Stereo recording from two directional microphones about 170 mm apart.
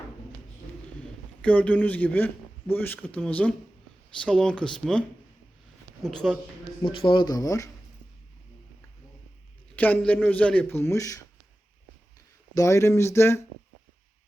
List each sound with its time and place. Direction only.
1.4 s a man's voice: 10° left (ahead or behind)
6.3 s speech: centre (ahead or behind)
6.8 s speech: 30° left (ahead or behind)
9.7 s a man's voice: 10° left (ahead or behind)
12.5 s a man's voice: 20° left (ahead or behind)